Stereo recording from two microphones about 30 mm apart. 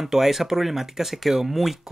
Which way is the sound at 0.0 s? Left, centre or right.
Centre.